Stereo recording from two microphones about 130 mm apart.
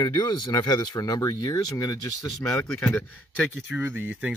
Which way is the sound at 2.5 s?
5° left (ahead or behind).